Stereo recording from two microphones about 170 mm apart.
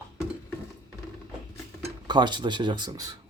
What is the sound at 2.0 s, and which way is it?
Speech, 25° right (ahead or behind).